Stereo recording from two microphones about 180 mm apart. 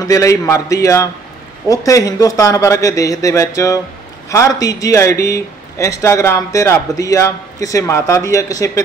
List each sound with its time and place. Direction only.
0.0 s a man's voice: 15° left (ahead or behind)